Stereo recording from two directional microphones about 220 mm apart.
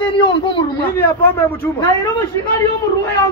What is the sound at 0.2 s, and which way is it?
Speech, 20° left (ahead or behind).